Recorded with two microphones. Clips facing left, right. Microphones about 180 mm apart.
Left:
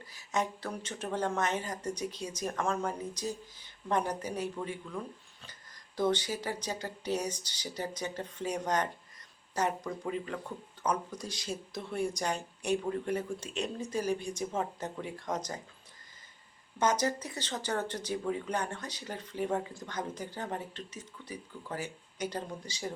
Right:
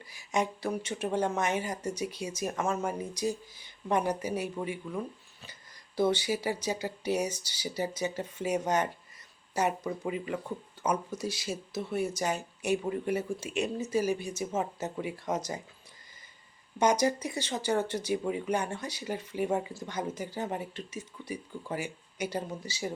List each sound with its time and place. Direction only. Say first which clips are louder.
0.1 s speech: right 3 dB; 10° right (ahead or behind)
6.0 s speech: right 3 dB; 10° right (ahead or behind)
16.7 s speech: right 4 dB; 10° right (ahead or behind)